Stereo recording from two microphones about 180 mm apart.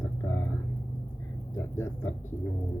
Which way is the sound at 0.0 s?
10° left (ahead or behind).